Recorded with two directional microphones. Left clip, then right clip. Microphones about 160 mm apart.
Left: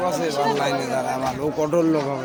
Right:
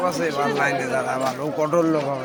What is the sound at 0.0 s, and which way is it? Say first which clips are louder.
Speech: even; 10° left (ahead or behind).